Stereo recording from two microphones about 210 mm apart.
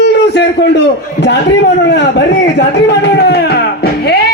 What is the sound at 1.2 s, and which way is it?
A man's voice, 55° left (ahead or behind).